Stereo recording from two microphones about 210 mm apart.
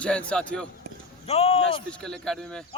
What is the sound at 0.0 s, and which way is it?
Speech, 5° left (ahead or behind).